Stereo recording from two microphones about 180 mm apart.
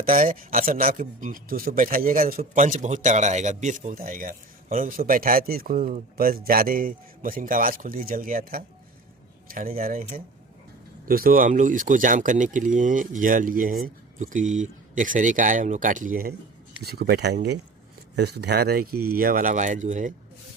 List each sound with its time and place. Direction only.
0.0 s speech: 50° right (ahead or behind)